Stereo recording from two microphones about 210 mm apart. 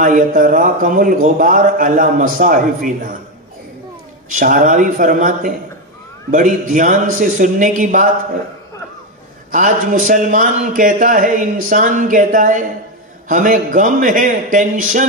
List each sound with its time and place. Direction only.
0.0 s a man's voice: 40° right (ahead or behind)
4.4 s a man's voice: 40° right (ahead or behind)
9.5 s a man's voice: 40° right (ahead or behind)